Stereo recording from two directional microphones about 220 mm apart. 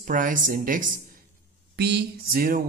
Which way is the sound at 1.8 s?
50° right (ahead or behind).